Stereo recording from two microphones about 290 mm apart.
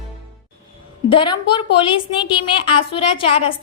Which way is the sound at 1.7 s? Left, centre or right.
Centre.